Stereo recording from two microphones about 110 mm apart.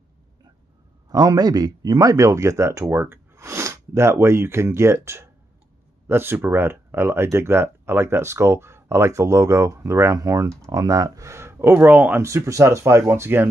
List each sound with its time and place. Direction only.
1.1 s speech: 40° right (ahead or behind); by 13.5 s 20° right (ahead or behind)